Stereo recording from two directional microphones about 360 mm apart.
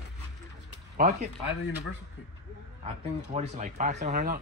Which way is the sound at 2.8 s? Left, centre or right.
Centre.